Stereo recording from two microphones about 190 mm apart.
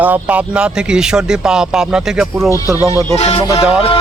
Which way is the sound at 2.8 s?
15° left (ahead or behind).